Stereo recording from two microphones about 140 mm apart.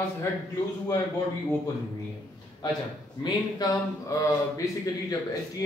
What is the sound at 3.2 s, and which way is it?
Speech, 25° left (ahead or behind).